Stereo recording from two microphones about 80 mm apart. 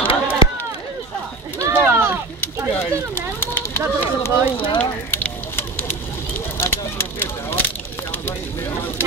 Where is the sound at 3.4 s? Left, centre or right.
Left.